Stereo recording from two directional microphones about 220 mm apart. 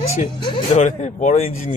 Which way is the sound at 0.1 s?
25° left (ahead or behind).